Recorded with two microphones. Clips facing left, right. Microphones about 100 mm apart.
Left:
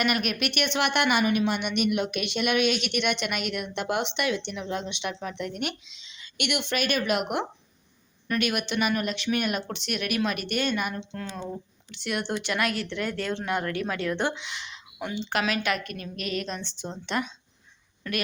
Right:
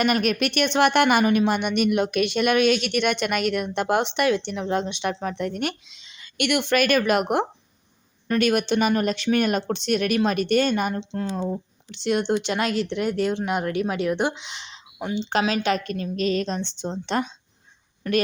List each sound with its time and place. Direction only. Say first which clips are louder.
0.0 s a woman's voice: right 5 dB; 35° right (ahead or behind)
18.0 s speech: right 9 dB; 20° right (ahead or behind)